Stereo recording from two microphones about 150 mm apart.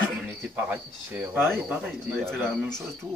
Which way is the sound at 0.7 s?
10° right (ahead or behind).